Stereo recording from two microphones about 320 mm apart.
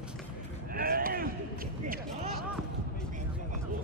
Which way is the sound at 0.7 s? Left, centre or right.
Right.